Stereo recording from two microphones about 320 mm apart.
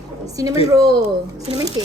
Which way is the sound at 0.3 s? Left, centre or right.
Centre.